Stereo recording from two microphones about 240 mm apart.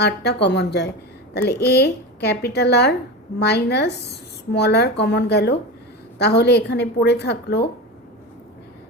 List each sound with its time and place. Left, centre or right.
0.0 s a woman's voice: left